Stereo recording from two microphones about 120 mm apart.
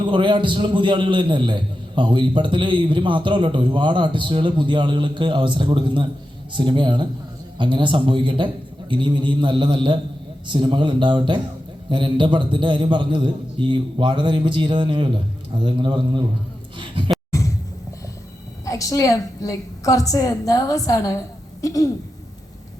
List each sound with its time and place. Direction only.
0.0 s a man's voice: 40° right (ahead or behind)
18.6 s a woman's voice: 30° left (ahead or behind)